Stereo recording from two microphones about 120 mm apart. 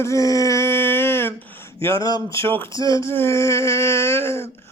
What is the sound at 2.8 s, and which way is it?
Humming, 30° left (ahead or behind).